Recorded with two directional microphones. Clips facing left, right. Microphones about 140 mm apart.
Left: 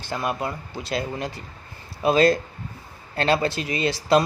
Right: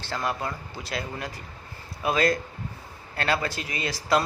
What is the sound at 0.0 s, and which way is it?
Speech, 15° left (ahead or behind).